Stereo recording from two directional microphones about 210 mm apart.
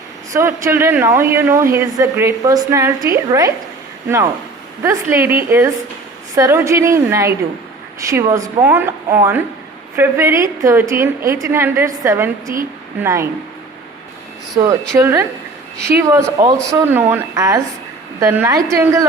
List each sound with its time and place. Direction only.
0.3 s speech: 10° right (ahead or behind)
4.8 s speech: 10° right (ahead or behind)
14.5 s speech: 15° right (ahead or behind)